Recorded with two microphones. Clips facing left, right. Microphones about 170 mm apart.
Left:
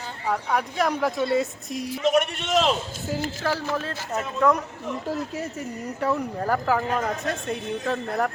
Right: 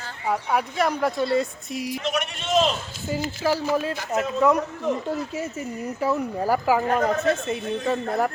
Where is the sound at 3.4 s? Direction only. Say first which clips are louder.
Right 4 dB; 10° right (ahead or behind).